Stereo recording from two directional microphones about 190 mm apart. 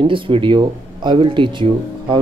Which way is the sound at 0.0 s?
25° right (ahead or behind).